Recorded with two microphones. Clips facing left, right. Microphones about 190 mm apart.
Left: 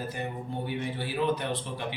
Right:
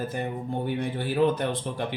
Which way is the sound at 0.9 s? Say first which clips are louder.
Right 6 dB; 50° right (ahead or behind).